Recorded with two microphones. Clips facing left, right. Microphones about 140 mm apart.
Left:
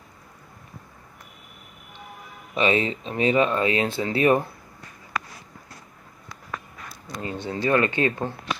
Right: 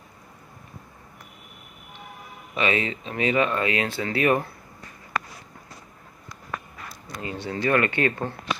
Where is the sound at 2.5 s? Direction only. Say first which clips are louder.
Left 3 dB; 30° left (ahead or behind).